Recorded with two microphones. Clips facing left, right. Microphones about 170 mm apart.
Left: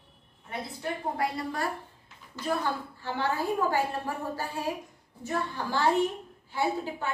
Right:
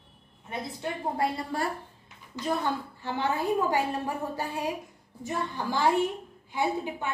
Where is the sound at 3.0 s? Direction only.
20° right (ahead or behind).